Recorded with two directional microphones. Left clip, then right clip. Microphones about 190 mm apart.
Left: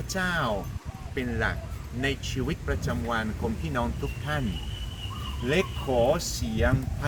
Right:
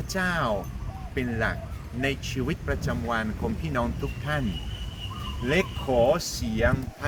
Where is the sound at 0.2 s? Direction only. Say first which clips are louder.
Right 1 dB; 35° right (ahead or behind).